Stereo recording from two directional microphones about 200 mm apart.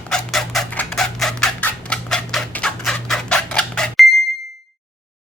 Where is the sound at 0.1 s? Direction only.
Centre (ahead or behind).